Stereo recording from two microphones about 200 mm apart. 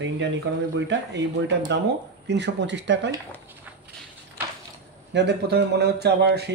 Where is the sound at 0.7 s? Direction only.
60° right (ahead or behind).